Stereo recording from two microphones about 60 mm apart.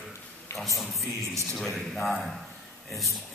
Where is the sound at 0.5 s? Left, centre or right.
Left.